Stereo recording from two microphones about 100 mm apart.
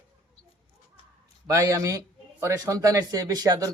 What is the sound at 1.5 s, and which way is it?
Speech, 35° right (ahead or behind).